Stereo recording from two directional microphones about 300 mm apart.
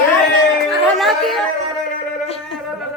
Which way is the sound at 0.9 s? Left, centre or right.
Centre.